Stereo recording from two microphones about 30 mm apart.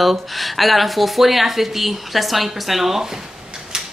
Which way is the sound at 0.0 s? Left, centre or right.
Centre.